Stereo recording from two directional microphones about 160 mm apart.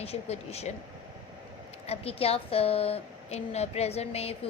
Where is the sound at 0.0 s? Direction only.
40° left (ahead or behind).